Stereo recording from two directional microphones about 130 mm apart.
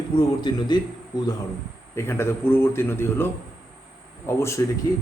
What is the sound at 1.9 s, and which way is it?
A man's voice, 20° left (ahead or behind).